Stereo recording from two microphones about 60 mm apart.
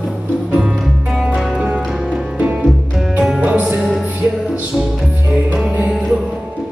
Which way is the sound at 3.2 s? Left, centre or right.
Centre.